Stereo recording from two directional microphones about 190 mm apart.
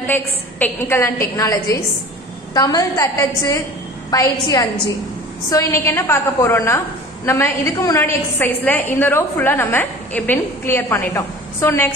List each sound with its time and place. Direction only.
0.0 s a woman's voice: 10° left (ahead or behind)